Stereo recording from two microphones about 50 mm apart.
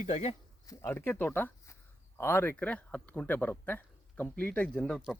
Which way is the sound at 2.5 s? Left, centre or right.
Left.